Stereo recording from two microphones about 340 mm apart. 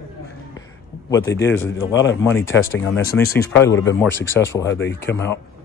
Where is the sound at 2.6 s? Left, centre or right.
Left.